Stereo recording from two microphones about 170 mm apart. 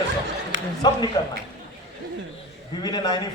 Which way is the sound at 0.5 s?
90° right.